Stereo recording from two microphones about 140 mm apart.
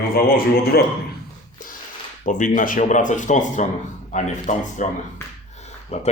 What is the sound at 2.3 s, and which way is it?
Speech, 65° left (ahead or behind).